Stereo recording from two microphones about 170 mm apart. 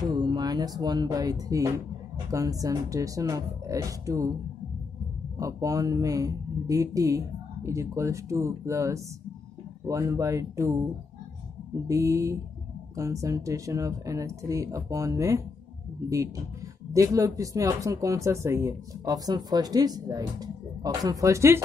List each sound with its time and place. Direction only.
0.1 s speech: 25° right (ahead or behind)
5.4 s speech: 20° right (ahead or behind)
11.9 s speech: 20° right (ahead or behind)
16.9 s speech: 20° right (ahead or behind)